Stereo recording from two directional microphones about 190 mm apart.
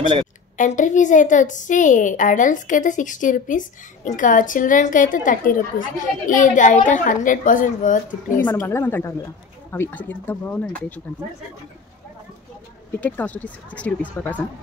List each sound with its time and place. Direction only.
0.6 s a woman's voice: 40° left (ahead or behind)
8.5 s speech: 15° left (ahead or behind)
13.0 s speech: 10° left (ahead or behind)